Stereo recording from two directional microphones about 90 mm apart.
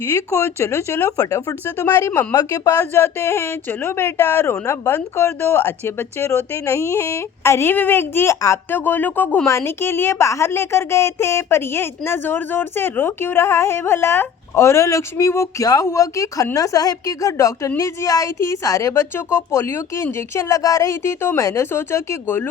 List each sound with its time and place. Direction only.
0.1 s a woman's voice: 35° left (ahead or behind)
1.6 s speech: 25° left (ahead or behind)
2.3 s speech: 45° left (ahead or behind)
2.6 s a woman's voice: 30° left (ahead or behind)